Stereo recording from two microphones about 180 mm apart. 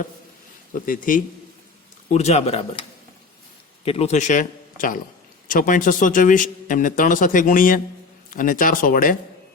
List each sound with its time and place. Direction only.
0.7 s speech: 50° left (ahead or behind)
2.1 s speech: 35° left (ahead or behind)
3.8 s speech: 35° left (ahead or behind); by 9.1 s 50° left (ahead or behind)